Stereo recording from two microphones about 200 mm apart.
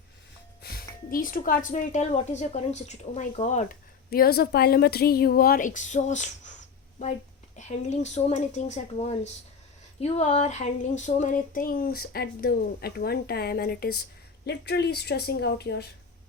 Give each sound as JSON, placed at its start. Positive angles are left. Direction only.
{"t": 0.6, "sound": "speech", "side_deg": 50}
{"t": 7.5, "sound": "a woman's voice", "side_deg": 35}